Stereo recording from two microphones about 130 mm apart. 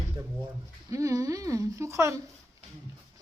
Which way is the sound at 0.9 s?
25° right (ahead or behind).